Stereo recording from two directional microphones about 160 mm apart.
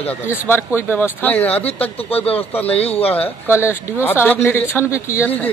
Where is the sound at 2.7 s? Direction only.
40° left (ahead or behind).